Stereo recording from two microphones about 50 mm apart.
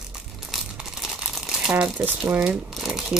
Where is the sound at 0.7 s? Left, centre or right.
Centre.